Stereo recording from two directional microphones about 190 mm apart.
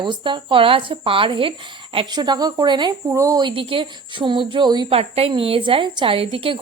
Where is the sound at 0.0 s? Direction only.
25° right (ahead or behind).